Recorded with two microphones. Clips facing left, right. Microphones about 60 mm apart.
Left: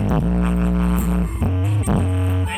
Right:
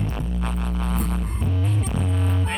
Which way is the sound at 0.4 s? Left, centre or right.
Left.